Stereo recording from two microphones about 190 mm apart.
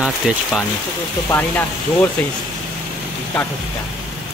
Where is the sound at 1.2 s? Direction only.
10° left (ahead or behind).